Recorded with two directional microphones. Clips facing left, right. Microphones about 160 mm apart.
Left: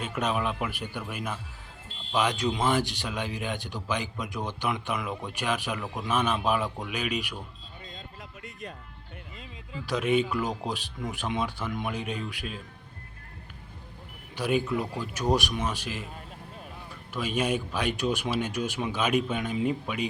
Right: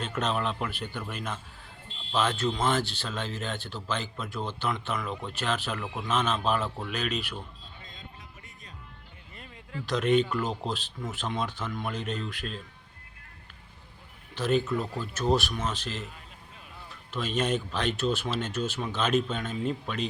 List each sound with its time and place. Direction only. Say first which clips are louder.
0.0 s speech: left 1 dB; 10° left (ahead or behind)
8.4 s music: left 11 dB; 75° left (ahead or behind)
9.8 s speech: right 1 dB; 10° left (ahead or behind)
14.3 s speech: even; 10° left (ahead or behind)
17.1 s speech: even; 10° left (ahead or behind)